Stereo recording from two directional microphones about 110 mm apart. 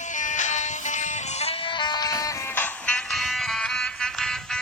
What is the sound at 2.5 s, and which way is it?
Music, 15° left (ahead or behind).